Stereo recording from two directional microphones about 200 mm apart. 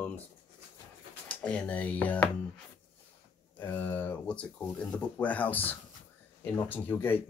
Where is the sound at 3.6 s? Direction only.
10° left (ahead or behind).